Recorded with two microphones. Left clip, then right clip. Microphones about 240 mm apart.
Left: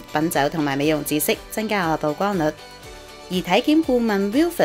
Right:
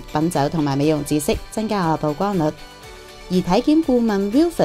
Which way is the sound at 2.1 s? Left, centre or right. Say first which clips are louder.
Right 1 dB; right.